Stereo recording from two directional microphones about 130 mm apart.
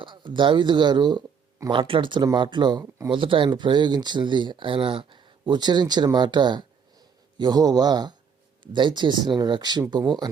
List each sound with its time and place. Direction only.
0.0 s speech: 40° right (ahead or behind)